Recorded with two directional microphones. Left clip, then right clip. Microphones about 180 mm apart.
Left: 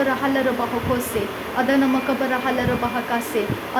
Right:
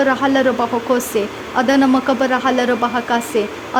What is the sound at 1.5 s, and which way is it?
Speech, 25° right (ahead or behind).